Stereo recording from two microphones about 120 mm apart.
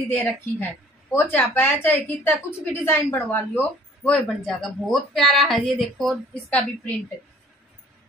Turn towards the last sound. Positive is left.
turn(degrees=10)  # may be behind; listen again after turning